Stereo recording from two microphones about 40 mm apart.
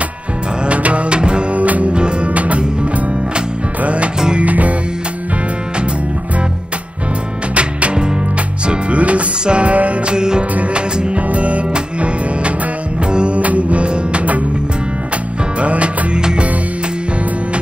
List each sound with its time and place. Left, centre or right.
0.7 s music: right
1.6 s music: right
7.5 s music: right
10.1 s music: centre
10.7 s music: right
15.6 s music: right